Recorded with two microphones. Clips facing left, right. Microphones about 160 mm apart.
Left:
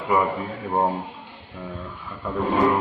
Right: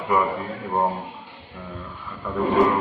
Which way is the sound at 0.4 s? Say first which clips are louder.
Left 1 dB; centre (ahead or behind).